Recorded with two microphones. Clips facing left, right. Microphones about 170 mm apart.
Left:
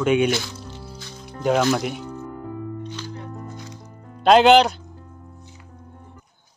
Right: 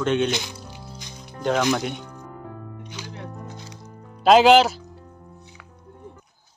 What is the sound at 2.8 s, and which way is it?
Music, 15° right (ahead or behind).